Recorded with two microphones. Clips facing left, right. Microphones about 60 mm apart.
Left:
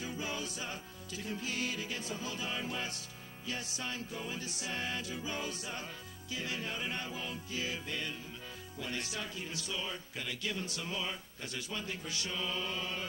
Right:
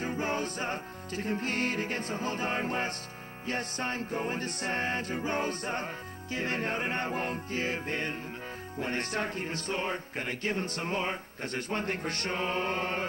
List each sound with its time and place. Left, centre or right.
0.0 s music: right
3.4 s speech: right